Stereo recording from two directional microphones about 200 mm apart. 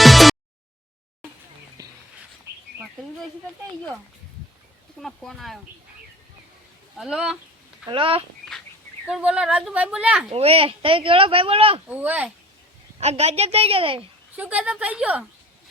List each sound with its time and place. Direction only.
0.0 s a sound: centre (ahead or behind)
1.8 s a sound: 20° right (ahead or behind)
4.9 s a woman's voice: centre (ahead or behind)
6.9 s a woman's voice: centre (ahead or behind)
7.9 s speech: 25° right (ahead or behind)
9.0 s a woman's voice: 5° right (ahead or behind)
10.2 s speech: 30° right (ahead or behind)
11.9 s a woman's voice: 10° right (ahead or behind)
13.0 s a woman's voice: 35° right (ahead or behind)
14.3 s a woman's voice: 5° right (ahead or behind)